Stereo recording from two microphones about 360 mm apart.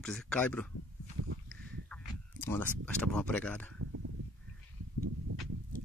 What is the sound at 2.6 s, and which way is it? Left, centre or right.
Speech, centre.